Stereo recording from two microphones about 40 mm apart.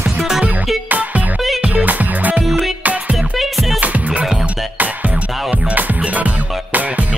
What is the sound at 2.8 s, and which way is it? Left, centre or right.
Music, right.